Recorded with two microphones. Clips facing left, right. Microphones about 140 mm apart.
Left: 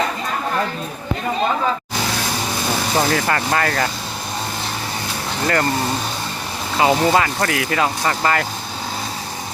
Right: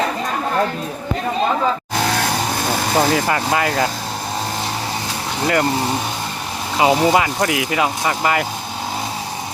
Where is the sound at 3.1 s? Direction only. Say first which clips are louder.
Right 1 dB; 10° right (ahead or behind).